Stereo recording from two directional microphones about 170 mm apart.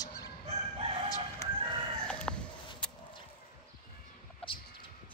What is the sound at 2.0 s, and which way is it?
Chicken, 5° left (ahead or behind).